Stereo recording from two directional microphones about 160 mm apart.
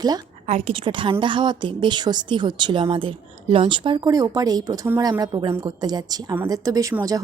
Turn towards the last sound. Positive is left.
turn(degrees=-20)  # may be behind; listen again after turning